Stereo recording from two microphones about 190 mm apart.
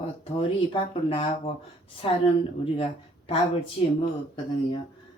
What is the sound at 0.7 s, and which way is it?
Speech, 30° left (ahead or behind).